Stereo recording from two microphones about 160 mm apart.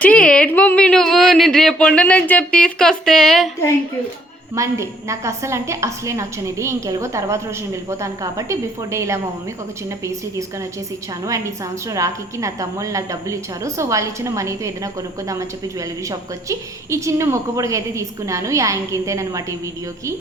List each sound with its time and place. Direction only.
0.0 s a woman's voice: 5° left (ahead or behind)
4.5 s a woman's voice: 20° right (ahead or behind)